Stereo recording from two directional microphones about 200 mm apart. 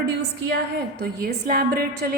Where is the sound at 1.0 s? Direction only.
50° right (ahead or behind).